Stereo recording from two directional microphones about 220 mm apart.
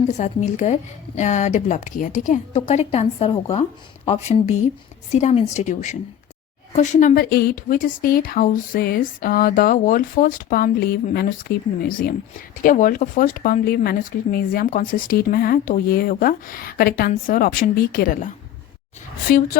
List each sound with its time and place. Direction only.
0.1 s speech: 35° left (ahead or behind)
19.3 s speech: 40° left (ahead or behind)